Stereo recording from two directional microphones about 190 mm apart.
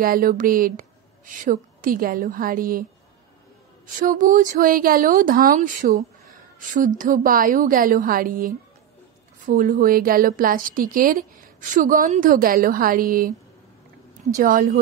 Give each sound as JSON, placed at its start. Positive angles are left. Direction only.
{"t": 0.0, "sound": "a woman's voice", "side_deg": -50}
{"t": 3.8, "sound": "a woman's voice", "side_deg": -45}
{"t": 14.3, "sound": "a woman's voice", "side_deg": -45}